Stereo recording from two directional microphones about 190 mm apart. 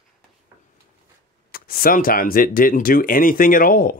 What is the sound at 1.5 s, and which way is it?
Speech, 50° left (ahead or behind).